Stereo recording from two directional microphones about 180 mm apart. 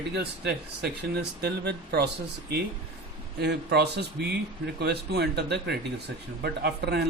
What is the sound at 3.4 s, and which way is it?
Speech, 65° right (ahead or behind).